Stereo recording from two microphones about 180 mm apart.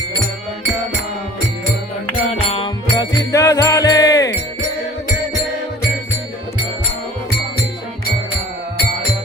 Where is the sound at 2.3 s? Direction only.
35° left (ahead or behind).